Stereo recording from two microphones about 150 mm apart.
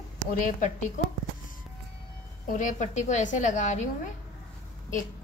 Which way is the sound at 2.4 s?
60° left (ahead or behind).